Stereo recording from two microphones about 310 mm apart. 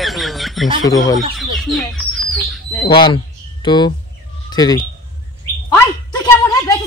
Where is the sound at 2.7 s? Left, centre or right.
Centre.